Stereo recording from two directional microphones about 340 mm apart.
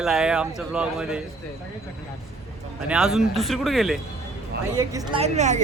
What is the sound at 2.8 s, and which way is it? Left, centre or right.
A woman's voice, centre.